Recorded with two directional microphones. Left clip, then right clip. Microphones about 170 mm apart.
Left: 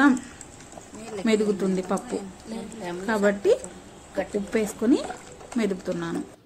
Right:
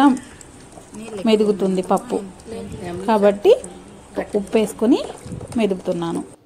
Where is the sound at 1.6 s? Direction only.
15° right (ahead or behind).